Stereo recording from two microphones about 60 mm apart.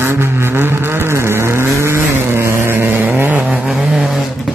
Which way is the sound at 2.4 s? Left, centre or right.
Right.